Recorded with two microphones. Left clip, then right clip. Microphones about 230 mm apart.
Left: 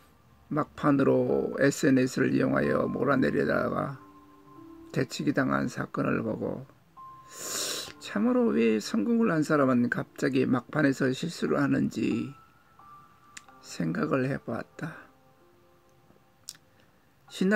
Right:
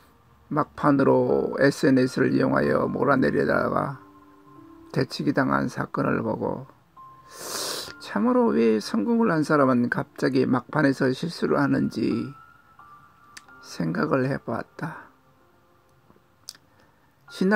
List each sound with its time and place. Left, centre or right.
0.5 s speech: centre
17.3 s speech: centre